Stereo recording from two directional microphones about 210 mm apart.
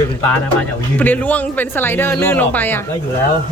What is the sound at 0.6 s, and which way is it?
A man's voice, 10° left (ahead or behind).